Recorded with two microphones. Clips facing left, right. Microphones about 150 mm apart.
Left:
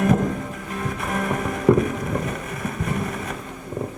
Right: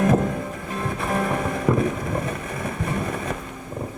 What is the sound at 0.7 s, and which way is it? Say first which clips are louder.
Music: right 2 dB; 30° right (ahead or behind).